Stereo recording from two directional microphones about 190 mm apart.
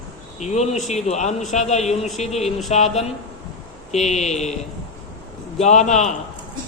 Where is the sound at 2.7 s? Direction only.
35° left (ahead or behind).